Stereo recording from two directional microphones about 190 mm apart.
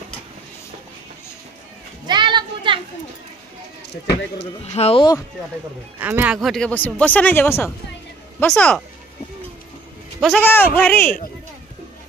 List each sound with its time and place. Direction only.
2.0 s children playing: 25° right (ahead or behind)
4.7 s speech: 30° left (ahead or behind)
5.9 s speech: 10° right (ahead or behind)
10.4 s speech: 10° left (ahead or behind)